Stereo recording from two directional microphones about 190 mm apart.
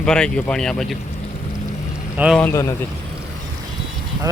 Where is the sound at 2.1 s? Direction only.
5° right (ahead or behind).